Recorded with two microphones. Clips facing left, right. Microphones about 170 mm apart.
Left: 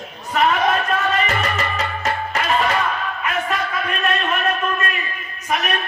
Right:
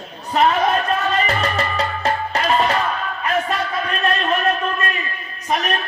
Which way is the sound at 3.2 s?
35° right (ahead or behind).